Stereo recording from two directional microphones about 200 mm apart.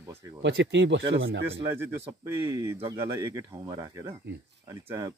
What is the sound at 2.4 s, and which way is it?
Speech, 15° right (ahead or behind).